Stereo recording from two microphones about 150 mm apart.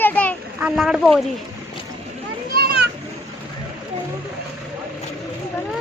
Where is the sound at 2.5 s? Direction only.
90° right.